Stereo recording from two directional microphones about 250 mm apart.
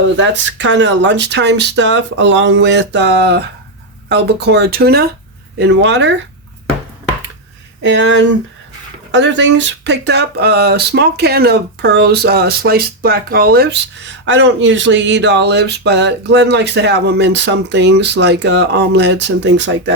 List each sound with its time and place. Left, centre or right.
0.2 s speech: right
7.8 s speech: right